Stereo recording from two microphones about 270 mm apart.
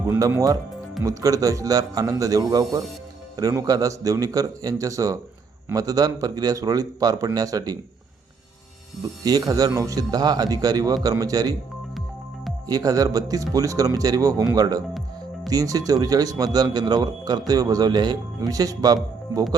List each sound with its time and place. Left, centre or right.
0.1 s speech: centre
9.2 s speech: centre
12.6 s speech: centre